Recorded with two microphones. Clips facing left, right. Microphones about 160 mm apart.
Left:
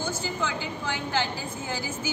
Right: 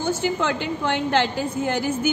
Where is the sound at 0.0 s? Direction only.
65° right (ahead or behind).